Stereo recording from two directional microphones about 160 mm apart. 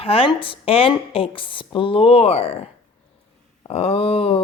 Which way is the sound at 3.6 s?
35° left (ahead or behind).